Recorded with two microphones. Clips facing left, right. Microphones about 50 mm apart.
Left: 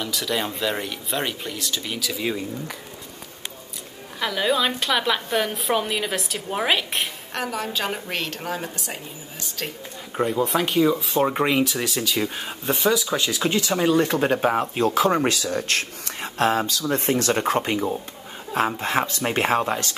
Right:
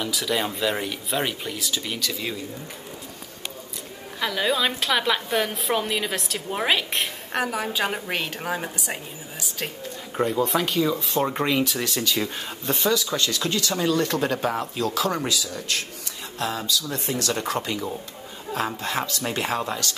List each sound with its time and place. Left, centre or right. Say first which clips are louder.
0.0 s a woman's voice: even; centre
4.2 s a woman's voice: left 1 dB; centre
7.3 s a woman's voice: right 2 dB; centre
10.1 s speech: left 1 dB; centre
11.6 s speech: left 1 dB; centre; by 15.2 s left
15.2 s speech: left 4 dB; left